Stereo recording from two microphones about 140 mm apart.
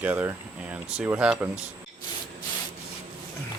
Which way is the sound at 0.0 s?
10° right (ahead or behind).